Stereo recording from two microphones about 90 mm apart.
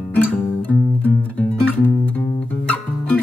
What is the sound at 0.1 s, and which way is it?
Music, 20° left (ahead or behind).